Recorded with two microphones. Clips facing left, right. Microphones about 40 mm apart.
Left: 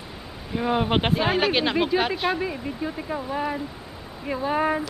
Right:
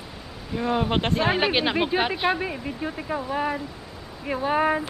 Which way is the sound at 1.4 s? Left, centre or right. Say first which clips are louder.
Left 1 dB; centre.